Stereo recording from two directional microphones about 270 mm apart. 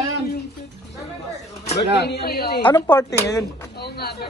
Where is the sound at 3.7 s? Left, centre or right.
Left.